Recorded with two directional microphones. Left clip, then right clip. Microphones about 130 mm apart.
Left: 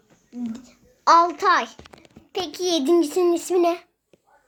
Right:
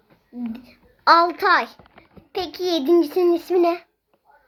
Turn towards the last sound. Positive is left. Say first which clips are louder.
# right 1 dB
turn(degrees=-5)  # may be behind; listen again after turning